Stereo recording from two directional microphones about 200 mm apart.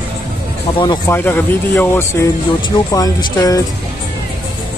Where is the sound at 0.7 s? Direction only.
20° left (ahead or behind).